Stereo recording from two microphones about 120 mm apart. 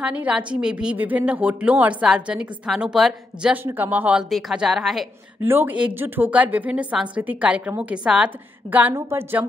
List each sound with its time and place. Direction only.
0.0 s a woman's voice: 10° right (ahead or behind)
3.6 s a woman's voice: 15° right (ahead or behind)
4.3 s speech: centre (ahead or behind)
5.4 s a woman's voice: 15° right (ahead or behind)